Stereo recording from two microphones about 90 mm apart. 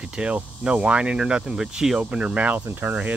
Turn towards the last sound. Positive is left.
turn(degrees=-20)  # may be behind; listen again after turning